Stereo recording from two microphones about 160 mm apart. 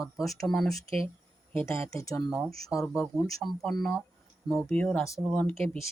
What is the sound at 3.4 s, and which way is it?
Speech, centre (ahead or behind).